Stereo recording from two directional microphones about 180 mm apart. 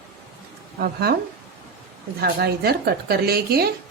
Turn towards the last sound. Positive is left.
turn(degrees=-60)  # may be behind; listen again after turning